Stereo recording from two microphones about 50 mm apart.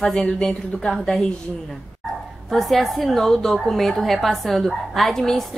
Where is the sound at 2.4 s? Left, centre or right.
Centre.